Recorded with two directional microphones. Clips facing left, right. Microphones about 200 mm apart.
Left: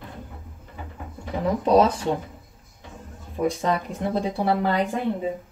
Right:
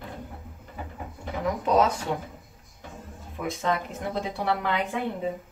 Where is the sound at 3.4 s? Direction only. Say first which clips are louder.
Left 5 dB; 35° left (ahead or behind).